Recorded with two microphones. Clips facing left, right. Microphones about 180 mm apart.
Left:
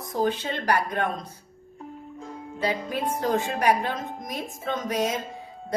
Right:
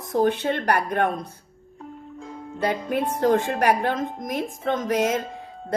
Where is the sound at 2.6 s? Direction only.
60° right (ahead or behind).